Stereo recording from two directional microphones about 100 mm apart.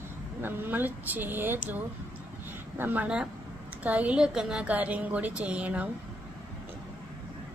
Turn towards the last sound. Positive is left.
turn(degrees=-15)  # may be behind; listen again after turning